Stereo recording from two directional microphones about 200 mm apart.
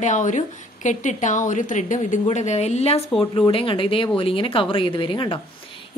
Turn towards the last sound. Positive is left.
turn(degrees=25)  # may be behind; listen again after turning